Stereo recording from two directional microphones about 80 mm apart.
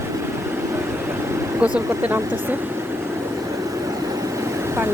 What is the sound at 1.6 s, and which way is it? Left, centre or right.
Speech, centre.